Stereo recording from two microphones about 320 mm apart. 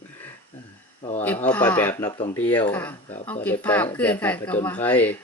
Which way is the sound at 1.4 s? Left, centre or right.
Centre.